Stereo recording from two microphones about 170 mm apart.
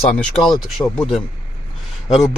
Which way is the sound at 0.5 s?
Centre (ahead or behind).